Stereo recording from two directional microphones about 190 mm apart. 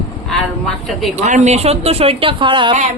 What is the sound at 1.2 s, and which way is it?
Speech, 40° right (ahead or behind).